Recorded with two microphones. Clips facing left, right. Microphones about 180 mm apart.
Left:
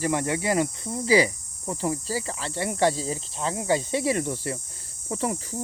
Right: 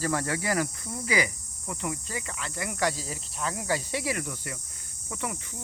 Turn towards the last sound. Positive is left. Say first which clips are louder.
# left 7 dB
turn(degrees=30)  # may be behind; listen again after turning